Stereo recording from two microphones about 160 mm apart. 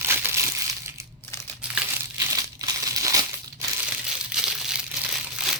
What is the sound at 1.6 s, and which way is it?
Crumpling, 5° right (ahead or behind).